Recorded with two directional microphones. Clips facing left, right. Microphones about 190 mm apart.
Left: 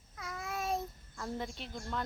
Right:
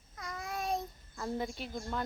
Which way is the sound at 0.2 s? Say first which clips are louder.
Even; 5° left (ahead or behind).